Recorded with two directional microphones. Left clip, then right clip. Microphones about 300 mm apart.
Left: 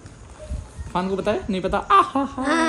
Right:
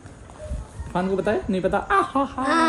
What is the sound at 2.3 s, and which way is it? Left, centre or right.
Speech, left.